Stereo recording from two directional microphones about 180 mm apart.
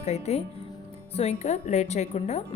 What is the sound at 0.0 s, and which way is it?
A woman's voice, 35° left (ahead or behind).